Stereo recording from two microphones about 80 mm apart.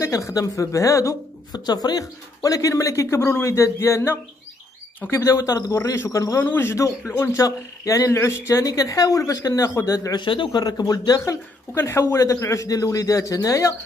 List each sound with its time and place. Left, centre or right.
0.0 s speech: left
1.5 s speech: left
6.4 s speech: left
10.1 s speech: left
10.6 s speech: left
11.7 s speech: left